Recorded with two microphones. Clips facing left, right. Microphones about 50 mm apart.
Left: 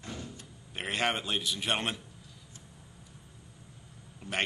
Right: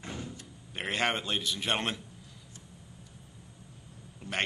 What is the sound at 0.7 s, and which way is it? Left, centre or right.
A man's voice, centre.